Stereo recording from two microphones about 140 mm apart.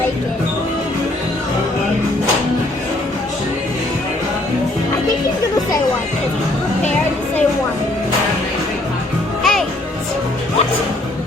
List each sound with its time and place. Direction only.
9.4 s music: centre (ahead or behind)